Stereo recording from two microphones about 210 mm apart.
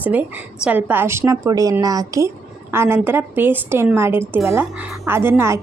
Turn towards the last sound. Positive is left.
turn(degrees=-10)  # may be behind; listen again after turning